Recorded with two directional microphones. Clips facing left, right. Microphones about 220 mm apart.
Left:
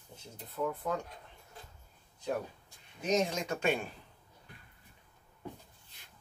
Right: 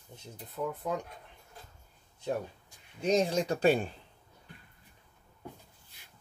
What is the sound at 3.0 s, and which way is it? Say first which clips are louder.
Speech: right 4 dB; 35° right (ahead or behind).